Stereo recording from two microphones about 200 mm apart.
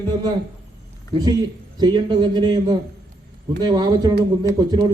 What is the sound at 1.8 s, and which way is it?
A man's voice, 20° right (ahead or behind).